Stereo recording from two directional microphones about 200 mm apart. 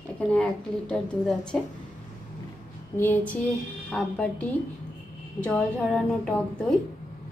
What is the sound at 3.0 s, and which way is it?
A woman's voice, 10° left (ahead or behind).